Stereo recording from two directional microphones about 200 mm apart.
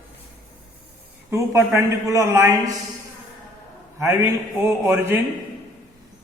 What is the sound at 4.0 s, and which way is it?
A man's voice, 15° right (ahead or behind).